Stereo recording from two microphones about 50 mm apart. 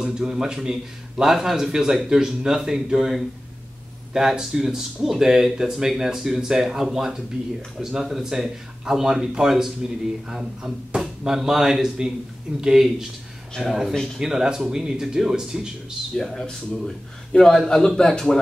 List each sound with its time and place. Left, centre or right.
0.0 s speech: centre
16.2 s a man's voice: centre